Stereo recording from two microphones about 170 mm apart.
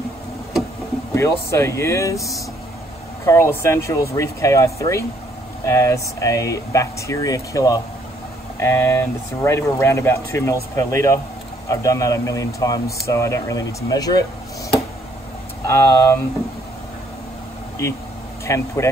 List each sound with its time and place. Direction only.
1.1 s speech: 15° left (ahead or behind)
3.3 s speech: 15° left (ahead or behind)
15.6 s speech: 15° left (ahead or behind)
18.4 s speech: 15° left (ahead or behind)